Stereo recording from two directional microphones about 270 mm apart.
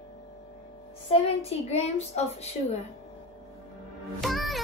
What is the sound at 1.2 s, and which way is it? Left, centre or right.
A child's voice, left.